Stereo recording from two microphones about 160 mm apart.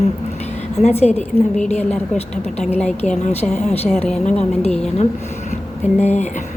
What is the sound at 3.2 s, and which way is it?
Speech, 40° left (ahead or behind).